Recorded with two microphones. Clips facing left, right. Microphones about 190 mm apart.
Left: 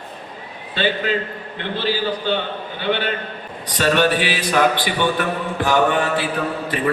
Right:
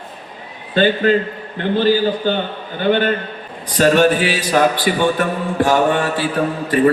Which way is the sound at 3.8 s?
40° right (ahead or behind).